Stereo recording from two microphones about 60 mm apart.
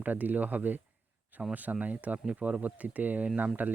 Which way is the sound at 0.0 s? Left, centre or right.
Right.